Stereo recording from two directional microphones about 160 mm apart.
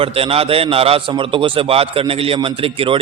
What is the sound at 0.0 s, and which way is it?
A man's voice, 35° right (ahead or behind).